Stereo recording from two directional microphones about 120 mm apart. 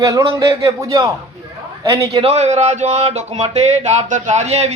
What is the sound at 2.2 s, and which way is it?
A man's voice, 65° right (ahead or behind).